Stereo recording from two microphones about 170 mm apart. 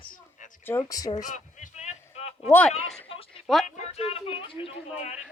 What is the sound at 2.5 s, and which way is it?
Speech, 10° left (ahead or behind).